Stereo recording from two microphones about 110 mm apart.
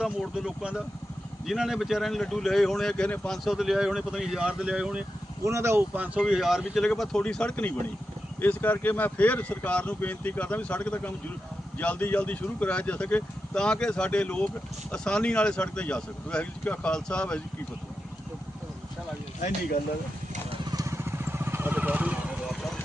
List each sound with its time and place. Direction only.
0.0 s speech: 5° right (ahead or behind)
5.5 s speech: 25° right (ahead or behind)
6.2 s speech: 5° right (ahead or behind)
20.7 s vehicle: 30° right (ahead or behind); by 22.5 s 10° right (ahead or behind)